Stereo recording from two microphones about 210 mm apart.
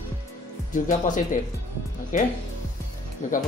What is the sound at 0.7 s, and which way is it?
Speech, 40° left (ahead or behind).